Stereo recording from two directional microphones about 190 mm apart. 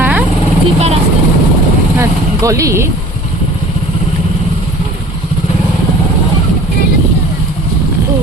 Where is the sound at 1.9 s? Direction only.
15° right (ahead or behind).